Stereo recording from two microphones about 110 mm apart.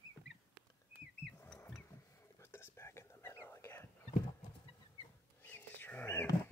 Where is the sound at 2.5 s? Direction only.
25° left (ahead or behind).